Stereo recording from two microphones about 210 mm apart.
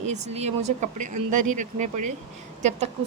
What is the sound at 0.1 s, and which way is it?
Speech, 30° right (ahead or behind).